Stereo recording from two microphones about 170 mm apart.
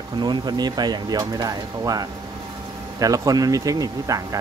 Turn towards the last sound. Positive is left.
turn(degrees=-20)  # may be behind; listen again after turning